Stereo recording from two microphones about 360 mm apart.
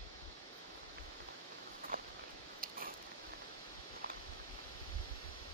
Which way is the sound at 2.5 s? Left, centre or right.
Right.